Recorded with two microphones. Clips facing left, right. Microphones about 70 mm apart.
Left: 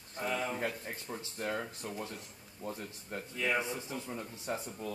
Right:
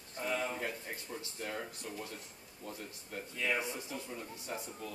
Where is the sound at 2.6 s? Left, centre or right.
Left.